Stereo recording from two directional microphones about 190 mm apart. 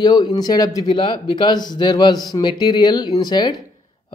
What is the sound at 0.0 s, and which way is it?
Speech, 20° left (ahead or behind).